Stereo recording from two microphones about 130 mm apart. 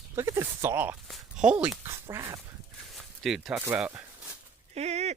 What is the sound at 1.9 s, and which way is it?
Speech, 20° right (ahead or behind).